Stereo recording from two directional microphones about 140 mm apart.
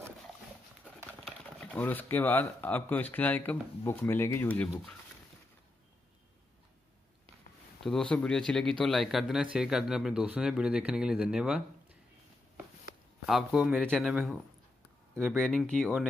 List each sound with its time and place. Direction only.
1.2 s speech: 10° left (ahead or behind)
7.8 s speech: 5° left (ahead or behind)
13.3 s speech: centre (ahead or behind)